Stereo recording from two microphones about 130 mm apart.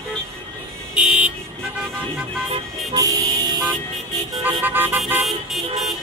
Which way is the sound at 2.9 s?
30° right (ahead or behind).